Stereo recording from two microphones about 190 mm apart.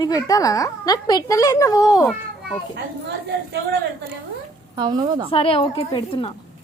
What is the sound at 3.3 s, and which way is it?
Speech, 65° right (ahead or behind).